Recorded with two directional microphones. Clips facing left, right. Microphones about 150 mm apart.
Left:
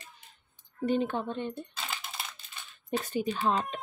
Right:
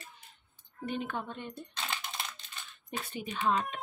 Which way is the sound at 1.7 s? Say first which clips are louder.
Right 1 dB; 5° left (ahead or behind).